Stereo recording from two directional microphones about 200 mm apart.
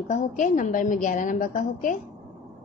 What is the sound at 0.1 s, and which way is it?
A woman's voice, 40° left (ahead or behind).